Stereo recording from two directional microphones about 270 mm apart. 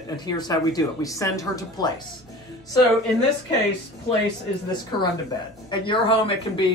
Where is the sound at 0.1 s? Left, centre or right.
Centre.